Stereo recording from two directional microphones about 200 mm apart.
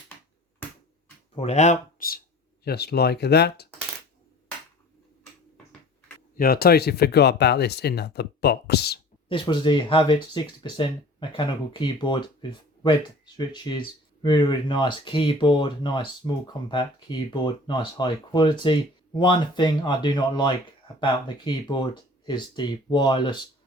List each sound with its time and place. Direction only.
1.4 s speech: 35° left (ahead or behind); by 3.7 s 55° left (ahead or behind)
6.3 s speech: 50° left (ahead or behind)
9.3 s speech: 25° left (ahead or behind)